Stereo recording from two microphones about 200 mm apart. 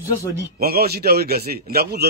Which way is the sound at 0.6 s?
50° right (ahead or behind).